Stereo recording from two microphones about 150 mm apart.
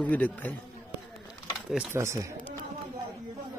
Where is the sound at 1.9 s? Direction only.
20° right (ahead or behind).